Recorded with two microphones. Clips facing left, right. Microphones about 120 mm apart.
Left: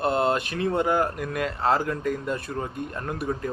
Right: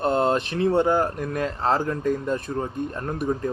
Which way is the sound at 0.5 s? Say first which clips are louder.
Right 3 dB; 30° right (ahead or behind).